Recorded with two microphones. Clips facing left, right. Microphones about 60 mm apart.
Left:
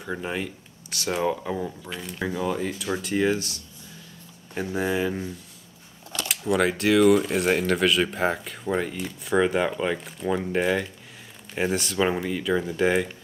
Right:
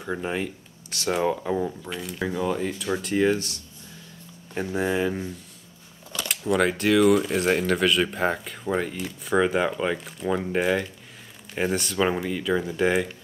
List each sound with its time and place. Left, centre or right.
0.0 s speech: centre
4.6 s speech: centre